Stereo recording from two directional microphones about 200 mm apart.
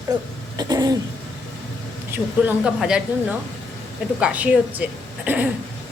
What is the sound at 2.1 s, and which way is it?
A woman's voice, 5° right (ahead or behind).